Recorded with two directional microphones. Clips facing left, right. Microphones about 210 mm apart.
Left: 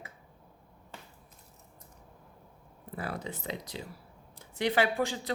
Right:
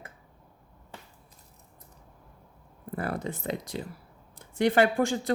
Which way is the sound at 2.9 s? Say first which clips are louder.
Right 5 dB; 50° right (ahead or behind).